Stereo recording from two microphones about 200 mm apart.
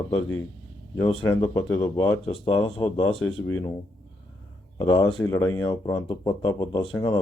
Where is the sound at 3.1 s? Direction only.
90° left.